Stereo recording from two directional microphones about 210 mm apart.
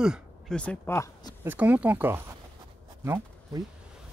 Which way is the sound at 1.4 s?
10° right (ahead or behind).